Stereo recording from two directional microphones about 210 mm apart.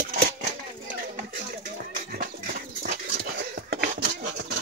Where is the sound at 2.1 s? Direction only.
45° right (ahead or behind).